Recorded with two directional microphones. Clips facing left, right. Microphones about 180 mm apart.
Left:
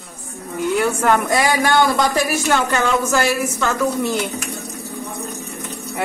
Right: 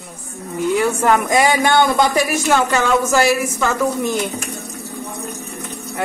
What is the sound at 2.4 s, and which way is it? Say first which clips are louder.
A woman's voice: right 2 dB; 5° right (ahead or behind).